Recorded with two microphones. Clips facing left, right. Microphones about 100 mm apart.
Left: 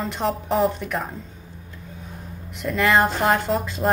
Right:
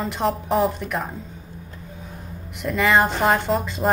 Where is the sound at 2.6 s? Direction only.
Centre (ahead or behind).